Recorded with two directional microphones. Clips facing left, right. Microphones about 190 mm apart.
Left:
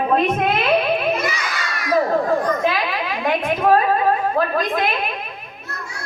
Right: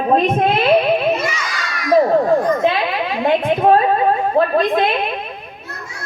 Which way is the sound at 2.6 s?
25° right (ahead or behind).